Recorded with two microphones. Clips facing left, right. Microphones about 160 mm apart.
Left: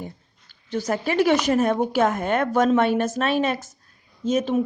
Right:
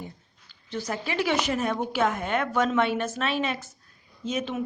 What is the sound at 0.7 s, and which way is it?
Speech, 45° left (ahead or behind).